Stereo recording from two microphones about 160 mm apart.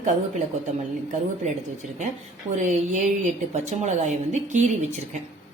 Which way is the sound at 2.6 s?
50° right (ahead or behind).